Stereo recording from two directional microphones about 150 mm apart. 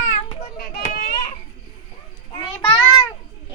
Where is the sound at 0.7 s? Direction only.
80° left.